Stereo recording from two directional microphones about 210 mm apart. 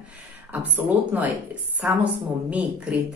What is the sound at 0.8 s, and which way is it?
Speech, 5° right (ahead or behind).